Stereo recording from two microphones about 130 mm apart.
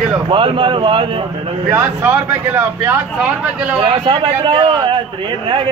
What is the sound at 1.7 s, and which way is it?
A man's voice, 15° right (ahead or behind).